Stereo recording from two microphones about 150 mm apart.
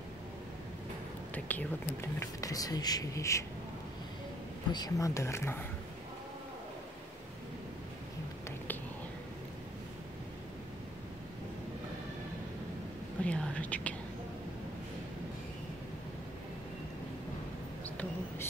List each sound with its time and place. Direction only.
1.3 s speech: 10° left (ahead or behind)
2.1 s speech: 25° left (ahead or behind)
4.7 s speech: 25° left (ahead or behind)
13.2 s whispering: 10° left (ahead or behind)
17.8 s a sound: 10° left (ahead or behind)